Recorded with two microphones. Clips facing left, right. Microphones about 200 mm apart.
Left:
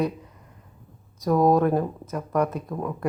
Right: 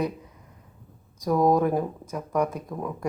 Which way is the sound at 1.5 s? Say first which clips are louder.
Left 2 dB; 10° right (ahead or behind).